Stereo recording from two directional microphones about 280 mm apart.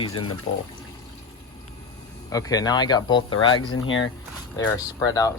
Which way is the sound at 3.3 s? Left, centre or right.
Left.